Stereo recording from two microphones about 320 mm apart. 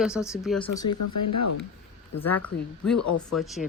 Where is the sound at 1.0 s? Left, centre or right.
Left.